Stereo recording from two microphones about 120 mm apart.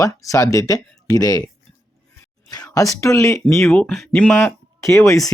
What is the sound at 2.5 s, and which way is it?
Speech, 30° left (ahead or behind).